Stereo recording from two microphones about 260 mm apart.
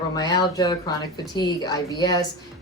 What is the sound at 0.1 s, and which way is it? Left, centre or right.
Speech, centre.